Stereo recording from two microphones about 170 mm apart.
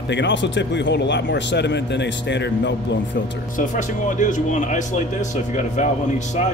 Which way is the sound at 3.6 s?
50° left (ahead or behind).